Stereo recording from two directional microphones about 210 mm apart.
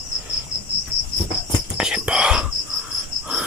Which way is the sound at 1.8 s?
5° right (ahead or behind).